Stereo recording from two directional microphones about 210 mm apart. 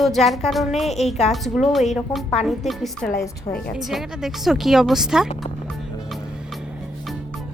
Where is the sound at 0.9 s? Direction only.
30° left (ahead or behind).